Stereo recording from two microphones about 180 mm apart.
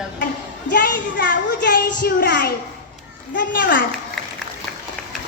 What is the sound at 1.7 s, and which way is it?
Speech, 50° left (ahead or behind).